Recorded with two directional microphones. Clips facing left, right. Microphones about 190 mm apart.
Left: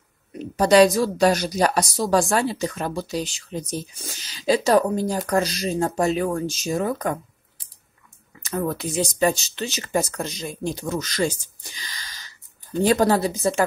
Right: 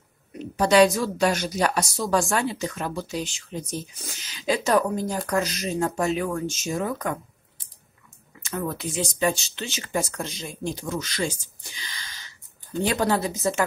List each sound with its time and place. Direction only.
0.6 s speech: 35° left (ahead or behind)
8.4 s speech: 40° left (ahead or behind)